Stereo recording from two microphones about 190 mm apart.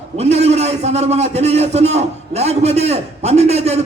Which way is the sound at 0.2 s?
35° right (ahead or behind).